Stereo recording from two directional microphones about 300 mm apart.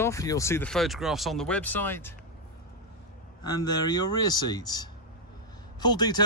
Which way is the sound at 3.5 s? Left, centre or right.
Centre.